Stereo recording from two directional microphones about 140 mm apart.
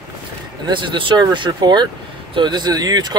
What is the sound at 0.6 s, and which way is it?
Speech, 35° right (ahead or behind).